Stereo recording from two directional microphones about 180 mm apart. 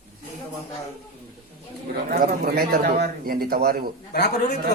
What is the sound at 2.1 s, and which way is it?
A man's voice, 55° right (ahead or behind).